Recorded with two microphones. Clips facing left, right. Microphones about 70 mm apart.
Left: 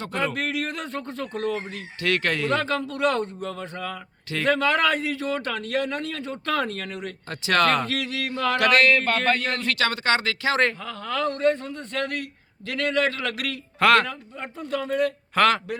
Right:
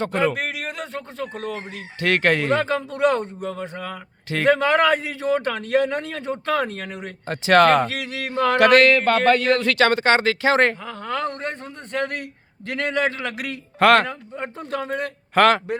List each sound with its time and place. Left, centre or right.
0.3 s speech: centre
2.0 s a man's voice: right; by 3.9 s centre
4.3 s a man's voice: right
8.8 s a man's voice: right
9.7 s a man's voice: right
13.7 s a man's voice: right